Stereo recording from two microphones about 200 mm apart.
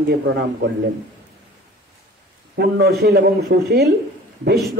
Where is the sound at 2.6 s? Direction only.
50° right (ahead or behind).